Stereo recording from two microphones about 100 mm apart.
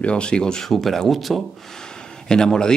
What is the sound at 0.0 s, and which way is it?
Speech, 10° left (ahead or behind).